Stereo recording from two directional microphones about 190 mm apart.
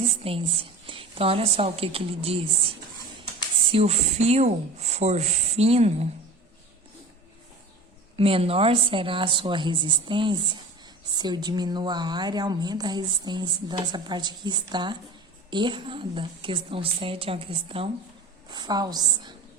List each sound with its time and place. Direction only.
0.2 s a woman's voice: 30° right (ahead or behind)
3.7 s speech: 30° right (ahead or behind)
8.1 s a woman's voice: 30° right (ahead or behind)